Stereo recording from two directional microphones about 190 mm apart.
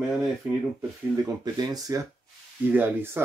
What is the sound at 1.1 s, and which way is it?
Speech, 20° right (ahead or behind).